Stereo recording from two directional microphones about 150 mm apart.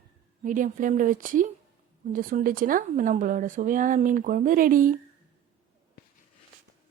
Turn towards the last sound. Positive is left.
turn(degrees=-65)  # may be behind; listen again after turning